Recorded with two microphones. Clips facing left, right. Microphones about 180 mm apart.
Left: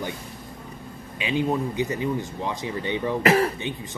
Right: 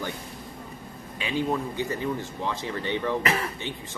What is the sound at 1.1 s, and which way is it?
Speech, 15° left (ahead or behind).